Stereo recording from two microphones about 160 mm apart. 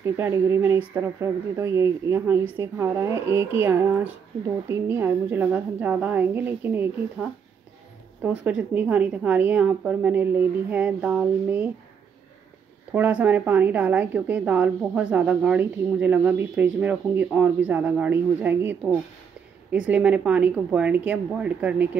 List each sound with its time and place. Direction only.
0.0 s a woman's voice: 15° right (ahead or behind)
12.9 s a woman's voice: 10° right (ahead or behind)